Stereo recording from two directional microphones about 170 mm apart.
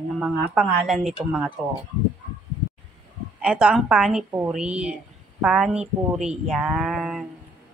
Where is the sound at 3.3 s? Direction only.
5° right (ahead or behind).